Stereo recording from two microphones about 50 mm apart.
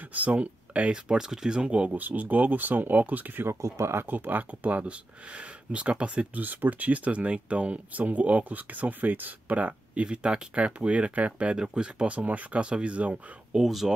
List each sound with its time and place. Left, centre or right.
0.1 s speech: right
1.0 s speech: centre; by 3.4 s right
3.4 s speech: right
4.0 s speech: right
6.4 s speech: right
10.0 s speech: centre
13.6 s speech: centre